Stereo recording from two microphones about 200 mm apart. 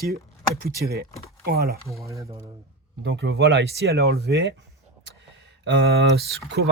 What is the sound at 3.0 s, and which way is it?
Speech, 60° right (ahead or behind).